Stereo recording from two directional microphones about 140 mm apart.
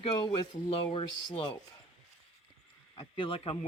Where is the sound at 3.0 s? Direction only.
40° left (ahead or behind).